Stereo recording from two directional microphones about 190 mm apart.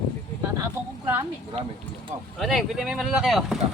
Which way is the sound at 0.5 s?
15° right (ahead or behind).